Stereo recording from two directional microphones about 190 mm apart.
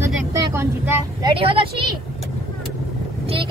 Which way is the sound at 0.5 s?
15° right (ahead or behind).